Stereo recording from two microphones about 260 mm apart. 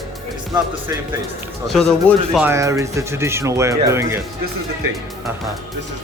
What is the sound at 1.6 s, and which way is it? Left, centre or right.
Speech, centre.